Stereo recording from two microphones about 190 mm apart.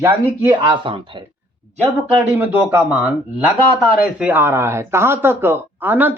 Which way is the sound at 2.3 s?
10° right (ahead or behind).